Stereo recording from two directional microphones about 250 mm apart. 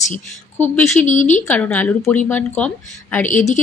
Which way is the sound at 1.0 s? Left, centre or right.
Left.